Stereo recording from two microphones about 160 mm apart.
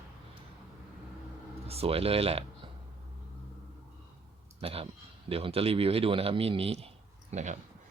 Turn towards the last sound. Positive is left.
turn(degrees=-45)  # may be behind; listen again after turning